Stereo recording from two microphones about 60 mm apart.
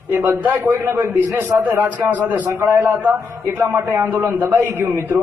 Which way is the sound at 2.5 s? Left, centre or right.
Right.